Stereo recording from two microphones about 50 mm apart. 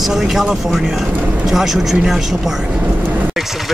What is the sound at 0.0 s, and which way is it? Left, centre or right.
Speech, centre.